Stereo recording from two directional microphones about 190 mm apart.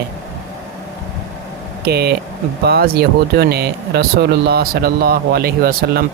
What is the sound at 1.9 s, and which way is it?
Speech, 55° right (ahead or behind).